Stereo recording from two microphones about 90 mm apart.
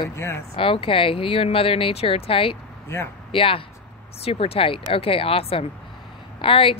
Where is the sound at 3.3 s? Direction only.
90° left.